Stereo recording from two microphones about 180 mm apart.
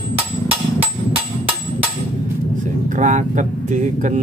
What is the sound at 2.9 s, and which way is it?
Speech, 45° right (ahead or behind).